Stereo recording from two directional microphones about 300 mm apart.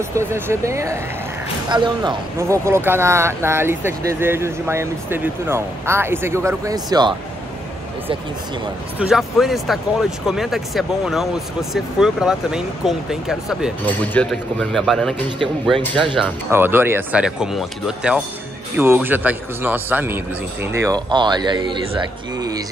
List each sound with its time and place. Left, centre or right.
0.1 s speech: centre
8.9 s speech: centre
15.9 s speech: centre